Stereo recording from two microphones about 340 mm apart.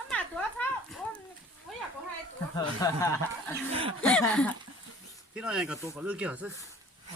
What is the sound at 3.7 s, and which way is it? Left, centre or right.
Speech, centre.